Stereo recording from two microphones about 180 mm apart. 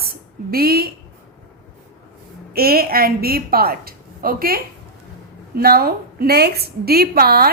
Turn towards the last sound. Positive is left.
turn(degrees=-60)  # may be behind; listen again after turning